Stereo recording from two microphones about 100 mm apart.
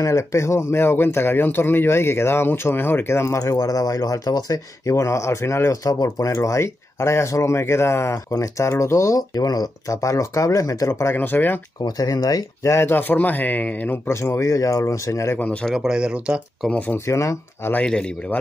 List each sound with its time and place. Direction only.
0.0 s speech: 30° left (ahead or behind)
11.8 s speech: 40° left (ahead or behind)
12.7 s speech: 20° left (ahead or behind)
15.3 s speech: 15° left (ahead or behind)
15.7 s speech: 5° right (ahead or behind)
16.6 s speech: 15° left (ahead or behind)
17.0 s speech: 30° left (ahead or behind)
17.7 s speech: 10° left (ahead or behind)